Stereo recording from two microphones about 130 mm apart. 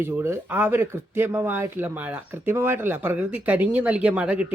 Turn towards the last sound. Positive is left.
turn(degrees=-10)  # may be behind; listen again after turning